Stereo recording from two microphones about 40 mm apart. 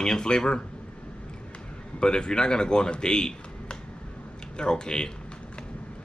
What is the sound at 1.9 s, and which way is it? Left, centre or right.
Speech, left.